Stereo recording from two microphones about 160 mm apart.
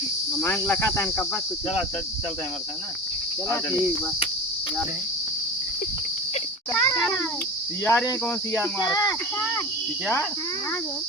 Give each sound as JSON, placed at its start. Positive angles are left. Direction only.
{"t": 0.4, "sound": "speech", "side_deg": 15}
{"t": 6.7, "sound": "speech", "side_deg": 10}